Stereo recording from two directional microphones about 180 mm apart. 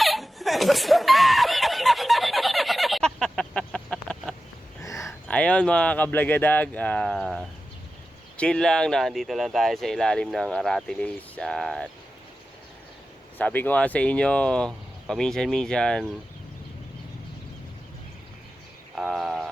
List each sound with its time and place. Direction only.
0.0 s snicker: centre (ahead or behind)
4.8 s a sound: 15° left (ahead or behind)
5.3 s speech: 5° left (ahead or behind)
13.4 s speech: 10° left (ahead or behind)
18.9 s speech: centre (ahead or behind)